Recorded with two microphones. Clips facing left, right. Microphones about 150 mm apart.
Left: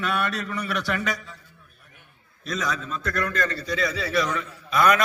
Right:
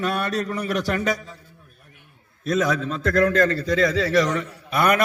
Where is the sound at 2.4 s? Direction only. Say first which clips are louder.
Right 7 dB; 55° right (ahead or behind).